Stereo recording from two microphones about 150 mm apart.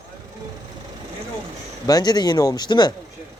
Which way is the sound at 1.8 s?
25° left (ahead or behind).